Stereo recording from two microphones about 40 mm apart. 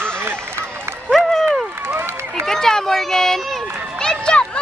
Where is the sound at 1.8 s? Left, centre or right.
Right.